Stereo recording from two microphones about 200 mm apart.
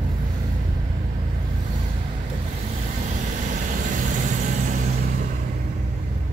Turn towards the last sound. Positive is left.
turn(degrees=-40)  # may be behind; listen again after turning